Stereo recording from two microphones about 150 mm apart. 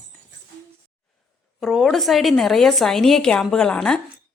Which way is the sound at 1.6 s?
Centre (ahead or behind).